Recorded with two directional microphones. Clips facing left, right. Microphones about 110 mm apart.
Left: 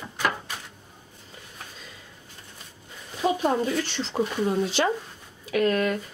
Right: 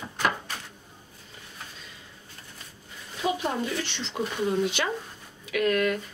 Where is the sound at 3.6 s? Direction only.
40° left (ahead or behind).